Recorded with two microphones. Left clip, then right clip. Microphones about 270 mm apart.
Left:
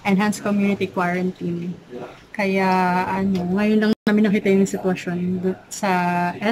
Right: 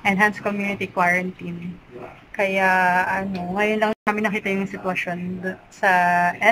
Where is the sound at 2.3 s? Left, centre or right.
Centre.